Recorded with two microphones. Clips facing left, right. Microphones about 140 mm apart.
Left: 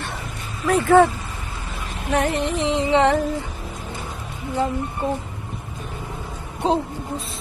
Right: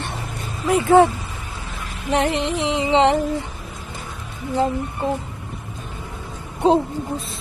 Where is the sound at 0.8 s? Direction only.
20° right (ahead or behind).